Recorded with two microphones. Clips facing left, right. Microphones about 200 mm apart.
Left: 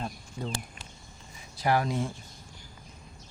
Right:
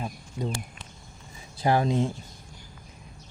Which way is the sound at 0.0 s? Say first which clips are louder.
Right 3 dB; 15° right (ahead or behind).